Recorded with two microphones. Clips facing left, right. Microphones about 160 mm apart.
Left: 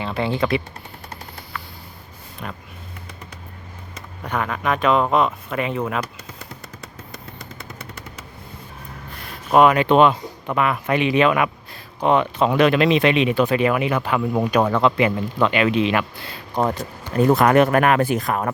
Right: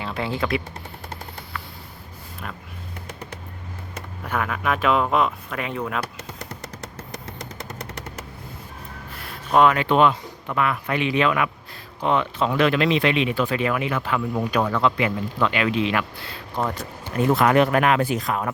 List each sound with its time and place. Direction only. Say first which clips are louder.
0.0 s speech: left 4 dB; centre (ahead or behind)
2.4 s speech: left 3 dB; centre (ahead or behind)
4.2 s speech: left 2 dB; 5° right (ahead or behind)
6.1 s machine gun: right 2 dB; 80° right
9.5 s speech: left 3 dB; 15° left (ahead or behind)
17.2 s speech: left 3 dB; 40° left (ahead or behind)